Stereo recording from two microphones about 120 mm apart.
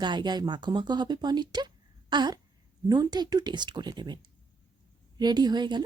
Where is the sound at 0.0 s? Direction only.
40° right (ahead or behind).